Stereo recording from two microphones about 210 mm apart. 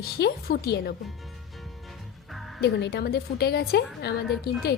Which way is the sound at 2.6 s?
55° left (ahead or behind).